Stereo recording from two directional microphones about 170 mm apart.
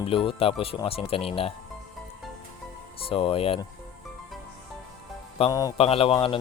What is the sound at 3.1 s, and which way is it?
Speech, 35° left (ahead or behind).